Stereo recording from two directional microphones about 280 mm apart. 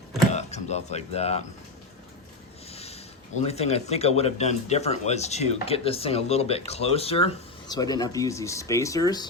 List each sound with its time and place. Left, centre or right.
0.3 s speech: left
2.6 s a sound: left
3.4 s speech: left